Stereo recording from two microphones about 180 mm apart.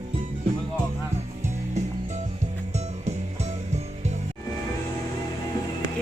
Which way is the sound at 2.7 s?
40° right (ahead or behind).